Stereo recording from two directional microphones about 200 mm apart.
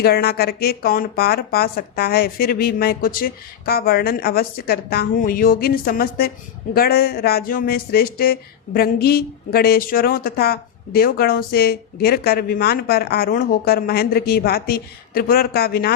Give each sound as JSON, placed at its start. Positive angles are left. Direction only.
{"t": 0.0, "sound": "speech", "side_deg": 50}